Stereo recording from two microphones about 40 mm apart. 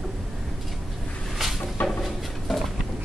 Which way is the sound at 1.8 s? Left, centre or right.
Left.